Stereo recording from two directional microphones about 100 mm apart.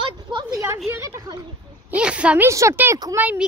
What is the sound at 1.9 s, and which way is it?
Speech, 10° right (ahead or behind).